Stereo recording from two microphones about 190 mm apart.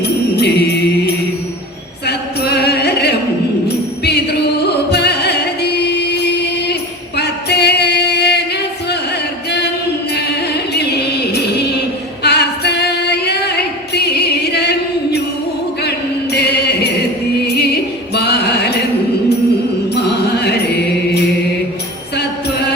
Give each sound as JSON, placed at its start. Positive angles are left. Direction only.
{"t": 0.0, "sound": "music", "side_deg": 60}
{"t": 2.0, "sound": "a sound", "side_deg": 60}
{"t": 4.0, "sound": "music", "side_deg": 60}
{"t": 7.2, "sound": "singing", "side_deg": 60}
{"t": 10.2, "sound": "music", "side_deg": 60}
{"t": 12.2, "sound": "singing", "side_deg": 60}
{"t": 13.9, "sound": "music", "side_deg": 60}
{"t": 16.3, "sound": "music", "side_deg": 60}
{"t": 19.9, "sound": "music", "side_deg": 60}